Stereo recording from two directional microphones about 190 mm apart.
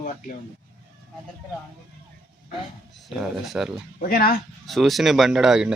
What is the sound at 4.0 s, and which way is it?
Speech, 50° left (ahead or behind).